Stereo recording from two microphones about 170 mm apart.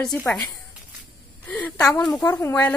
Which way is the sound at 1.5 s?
10° left (ahead or behind).